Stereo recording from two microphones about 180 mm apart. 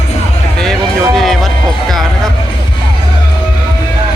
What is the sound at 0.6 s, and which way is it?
Music, 5° left (ahead or behind).